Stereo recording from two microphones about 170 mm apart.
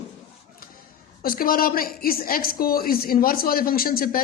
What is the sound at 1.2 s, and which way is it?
Speech, 60° left (ahead or behind).